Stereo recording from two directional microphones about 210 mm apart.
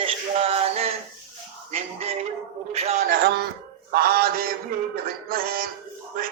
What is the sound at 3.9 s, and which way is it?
Mantra, 45° right (ahead or behind).